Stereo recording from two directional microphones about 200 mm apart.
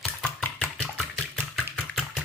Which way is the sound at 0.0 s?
5° left (ahead or behind).